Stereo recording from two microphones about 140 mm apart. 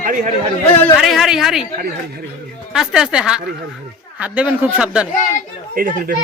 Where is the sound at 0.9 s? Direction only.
Centre (ahead or behind).